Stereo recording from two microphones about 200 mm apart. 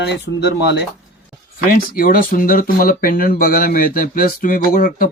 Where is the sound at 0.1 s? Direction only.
55° left (ahead or behind).